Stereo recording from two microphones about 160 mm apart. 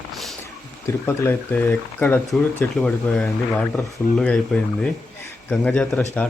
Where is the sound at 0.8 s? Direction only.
15° left (ahead or behind).